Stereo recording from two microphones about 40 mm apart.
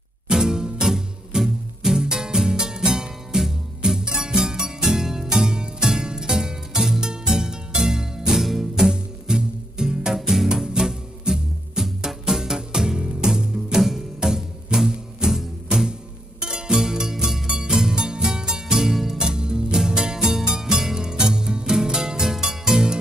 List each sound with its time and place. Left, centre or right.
0.3 s music: centre
10.1 s music: centre
10.5 s music: centre
16.4 s music: right